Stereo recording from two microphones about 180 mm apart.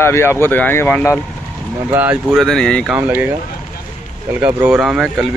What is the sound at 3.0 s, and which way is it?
Speech, 10° right (ahead or behind).